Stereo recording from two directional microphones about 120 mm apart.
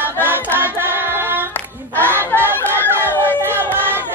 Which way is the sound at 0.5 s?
15° right (ahead or behind).